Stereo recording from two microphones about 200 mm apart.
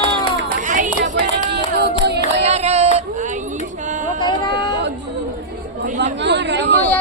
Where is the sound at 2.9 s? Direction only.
35° right (ahead or behind).